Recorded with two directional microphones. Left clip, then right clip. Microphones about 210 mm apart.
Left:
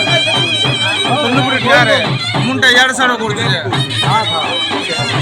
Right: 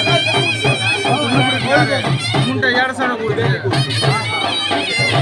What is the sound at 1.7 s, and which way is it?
Music, 40° left (ahead or behind).